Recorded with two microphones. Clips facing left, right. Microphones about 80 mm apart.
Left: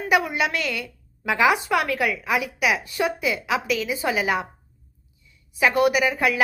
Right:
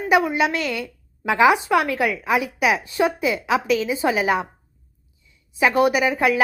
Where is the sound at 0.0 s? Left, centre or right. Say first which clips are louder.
Right 3 dB; right.